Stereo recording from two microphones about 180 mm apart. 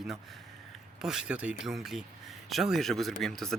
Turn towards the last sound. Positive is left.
turn(degrees=0)  # may be behind; listen again after turning